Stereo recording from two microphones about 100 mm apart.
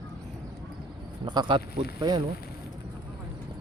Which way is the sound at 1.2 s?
45° right (ahead or behind).